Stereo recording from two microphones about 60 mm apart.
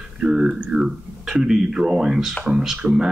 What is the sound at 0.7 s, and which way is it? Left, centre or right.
Speech, centre.